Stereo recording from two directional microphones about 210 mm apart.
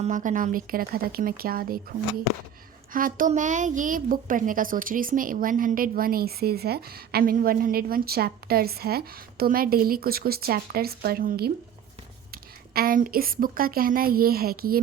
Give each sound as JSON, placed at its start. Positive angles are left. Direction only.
{"t": 0.0, "sound": "a woman's voice", "side_deg": -35}
{"t": 2.9, "sound": "a woman's voice", "side_deg": -40}